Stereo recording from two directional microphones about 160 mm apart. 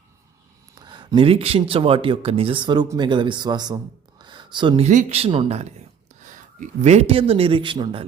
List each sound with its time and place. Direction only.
0.8 s speech: 30° right (ahead or behind)
4.2 s a sound: 30° right (ahead or behind)
4.9 s speech: 50° right (ahead or behind); by 8.0 s 30° right (ahead or behind)